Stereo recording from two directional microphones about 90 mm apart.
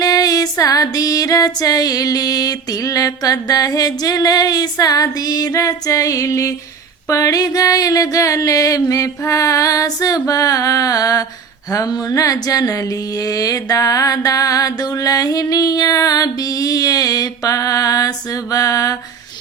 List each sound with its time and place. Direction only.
0.0 s music: 45° left (ahead or behind)